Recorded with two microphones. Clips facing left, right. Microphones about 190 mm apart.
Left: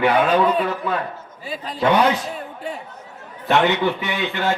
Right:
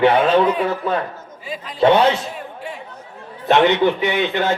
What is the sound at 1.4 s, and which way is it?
Speech, 35° left (ahead or behind).